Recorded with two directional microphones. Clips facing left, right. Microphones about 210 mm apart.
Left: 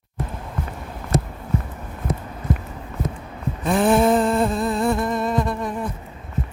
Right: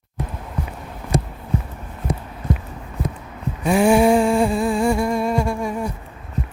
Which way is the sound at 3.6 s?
10° right (ahead or behind).